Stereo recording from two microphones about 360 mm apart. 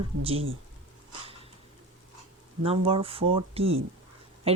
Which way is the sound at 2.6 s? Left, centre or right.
Centre.